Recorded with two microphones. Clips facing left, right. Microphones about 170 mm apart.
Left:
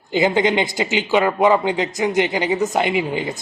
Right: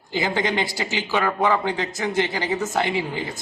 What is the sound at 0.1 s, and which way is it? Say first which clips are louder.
Speech: left 6 dB; 20° left (ahead or behind).